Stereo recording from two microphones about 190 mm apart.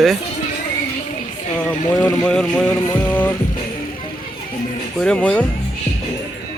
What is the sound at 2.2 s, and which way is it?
Speech, 5° left (ahead or behind).